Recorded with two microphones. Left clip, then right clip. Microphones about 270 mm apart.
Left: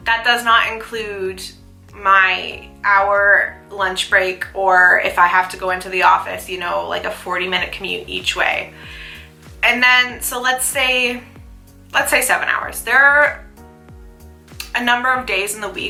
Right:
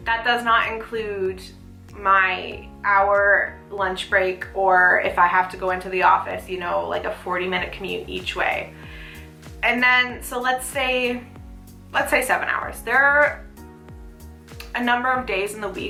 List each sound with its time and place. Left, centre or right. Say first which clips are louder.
0.0 s speech: left 5 dB; centre
4.8 s speech: left 6 dB; centre
5.0 s speech: left 4 dB; centre
14.6 s speech: left 5 dB; centre